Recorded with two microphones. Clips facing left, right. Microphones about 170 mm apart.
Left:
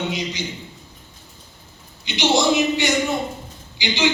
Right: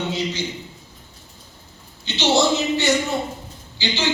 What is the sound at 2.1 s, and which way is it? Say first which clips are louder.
Speech: even; 15° left (ahead or behind).